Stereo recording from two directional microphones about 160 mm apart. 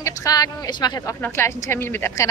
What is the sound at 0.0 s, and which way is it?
Speech, 20° left (ahead or behind).